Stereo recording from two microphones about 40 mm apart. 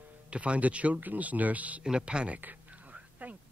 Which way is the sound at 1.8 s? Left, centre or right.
Right.